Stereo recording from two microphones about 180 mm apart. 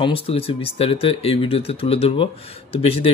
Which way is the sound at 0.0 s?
30° left (ahead or behind).